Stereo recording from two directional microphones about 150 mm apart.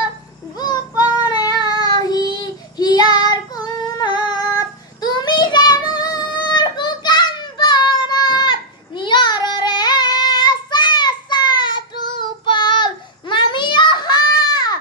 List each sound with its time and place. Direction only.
0.6 s child singing: 25° left (ahead or behind)